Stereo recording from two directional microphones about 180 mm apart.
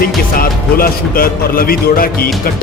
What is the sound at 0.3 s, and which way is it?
Speech, 55° left (ahead or behind).